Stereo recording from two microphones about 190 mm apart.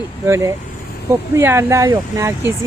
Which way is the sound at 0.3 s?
15° right (ahead or behind).